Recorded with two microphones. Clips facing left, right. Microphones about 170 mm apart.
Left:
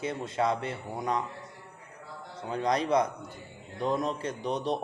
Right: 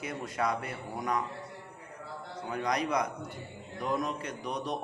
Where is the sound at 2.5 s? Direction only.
30° left (ahead or behind).